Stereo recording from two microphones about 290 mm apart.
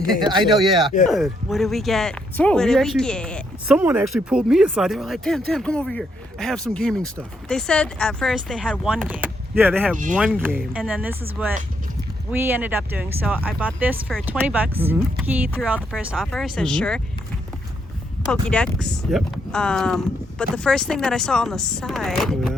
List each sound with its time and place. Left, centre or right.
0.2 s speech: centre
1.0 s speech: centre
18.3 s speech: centre